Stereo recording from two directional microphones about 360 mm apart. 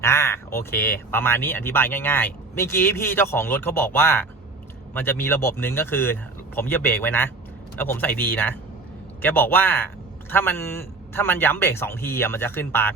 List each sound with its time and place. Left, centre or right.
0.0 s a man's voice: centre